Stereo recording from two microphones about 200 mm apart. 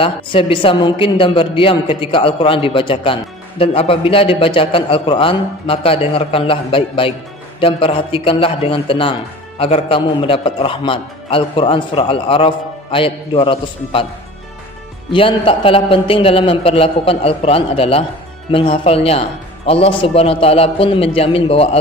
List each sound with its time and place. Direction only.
0.0 s a woman's voice: 25° left (ahead or behind)
15.1 s a woman's voice: 25° left (ahead or behind)